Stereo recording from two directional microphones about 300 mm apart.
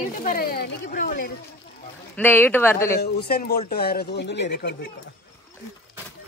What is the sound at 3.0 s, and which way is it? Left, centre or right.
Speech, left.